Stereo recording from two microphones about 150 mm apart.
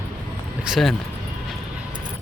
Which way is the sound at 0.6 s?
Centre (ahead or behind).